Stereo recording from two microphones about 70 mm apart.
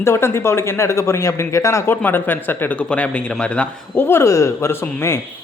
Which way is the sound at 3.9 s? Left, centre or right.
Left.